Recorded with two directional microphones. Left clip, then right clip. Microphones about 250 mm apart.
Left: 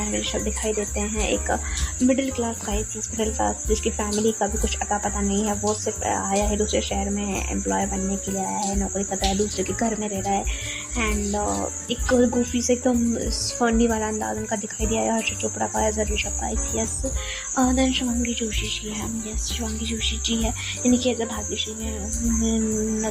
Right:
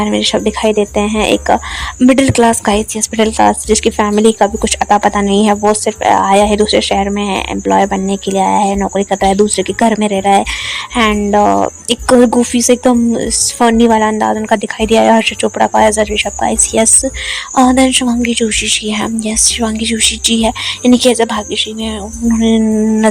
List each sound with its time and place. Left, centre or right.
0.0 s speech: right